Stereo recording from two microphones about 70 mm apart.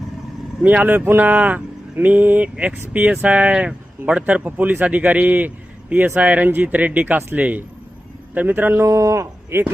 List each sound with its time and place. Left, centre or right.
0.6 s speech: right
8.8 s speech: right